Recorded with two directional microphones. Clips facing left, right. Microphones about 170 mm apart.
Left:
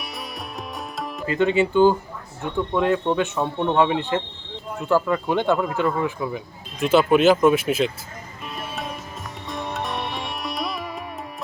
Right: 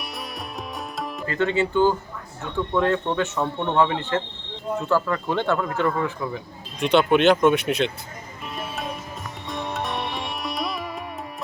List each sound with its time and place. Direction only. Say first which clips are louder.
1.3 s speech: left 3 dB; 15° left (ahead or behind)
6.7 s speech: left 1 dB; 5° left (ahead or behind)
8.5 s music: even; centre (ahead or behind)
9.5 s sitar: even; centre (ahead or behind)